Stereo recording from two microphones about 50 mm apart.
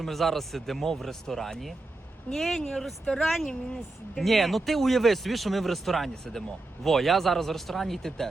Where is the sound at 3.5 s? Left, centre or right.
Centre.